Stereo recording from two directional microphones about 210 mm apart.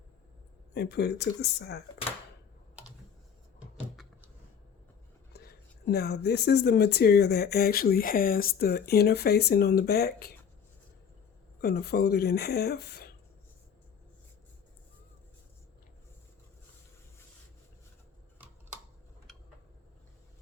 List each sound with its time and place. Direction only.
0.7 s speech: 50° left (ahead or behind)
5.3 s speech: 50° left (ahead or behind)
11.6 s speech: 50° left (ahead or behind)
19.3 s a sound: centre (ahead or behind)